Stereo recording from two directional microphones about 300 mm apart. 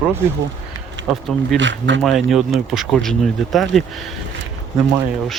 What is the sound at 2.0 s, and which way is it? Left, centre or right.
Speech, centre.